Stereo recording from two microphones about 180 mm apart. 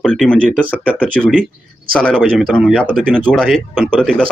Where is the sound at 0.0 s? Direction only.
5° left (ahead or behind).